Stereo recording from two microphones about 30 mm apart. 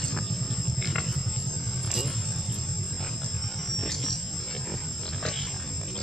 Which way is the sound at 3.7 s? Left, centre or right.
Centre.